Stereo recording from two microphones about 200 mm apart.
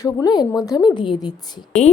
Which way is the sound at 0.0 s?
20° left (ahead or behind).